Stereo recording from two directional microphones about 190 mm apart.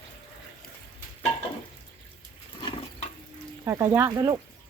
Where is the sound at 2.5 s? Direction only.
25° left (ahead or behind).